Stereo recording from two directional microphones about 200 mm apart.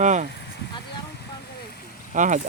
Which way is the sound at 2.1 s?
40° right (ahead or behind).